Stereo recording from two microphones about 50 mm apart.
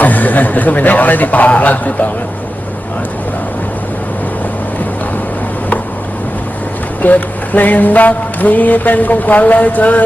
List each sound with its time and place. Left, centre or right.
0.0 s mantra: left
7.0 s mantra: left